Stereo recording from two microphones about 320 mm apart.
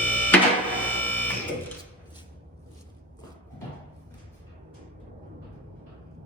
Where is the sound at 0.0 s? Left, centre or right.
Centre.